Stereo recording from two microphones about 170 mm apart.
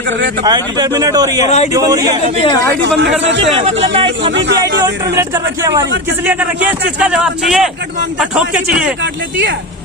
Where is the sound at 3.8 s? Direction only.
35° right (ahead or behind).